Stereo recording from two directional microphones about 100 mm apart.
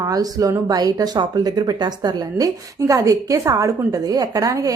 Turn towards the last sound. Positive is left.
turn(degrees=-35)  # may be behind; listen again after turning